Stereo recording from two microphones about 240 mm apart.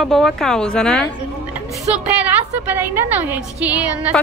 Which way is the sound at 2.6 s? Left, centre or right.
Centre.